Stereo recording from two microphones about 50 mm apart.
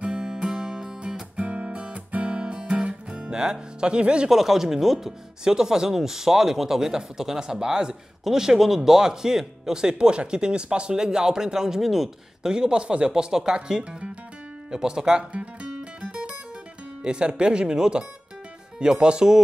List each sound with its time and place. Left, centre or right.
0.0 s music: centre
1.3 s guitar: right
4.3 s speech: centre
12.5 s speech: centre
15.3 s music: right
17.0 s speech: centre